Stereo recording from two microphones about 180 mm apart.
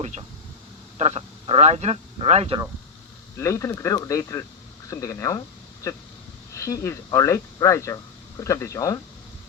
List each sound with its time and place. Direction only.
0.0 s speech: 35° right (ahead or behind)
3.3 s speech: 15° left (ahead or behind)
6.5 s speech: 15° left (ahead or behind)